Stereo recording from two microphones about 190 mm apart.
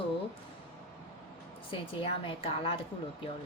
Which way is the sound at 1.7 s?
25° left (ahead or behind).